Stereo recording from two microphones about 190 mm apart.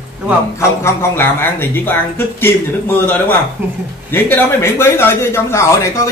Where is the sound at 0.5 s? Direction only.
15° left (ahead or behind).